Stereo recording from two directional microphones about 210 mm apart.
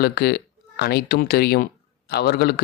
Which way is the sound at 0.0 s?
50° left (ahead or behind).